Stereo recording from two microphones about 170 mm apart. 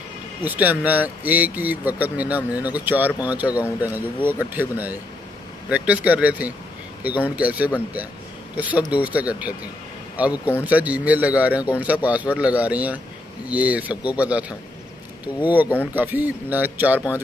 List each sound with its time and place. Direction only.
0.4 s speech: 10° right (ahead or behind)
15.4 s speech: 10° right (ahead or behind)